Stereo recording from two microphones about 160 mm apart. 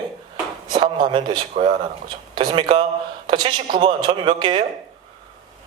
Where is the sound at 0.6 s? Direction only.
30° right (ahead or behind).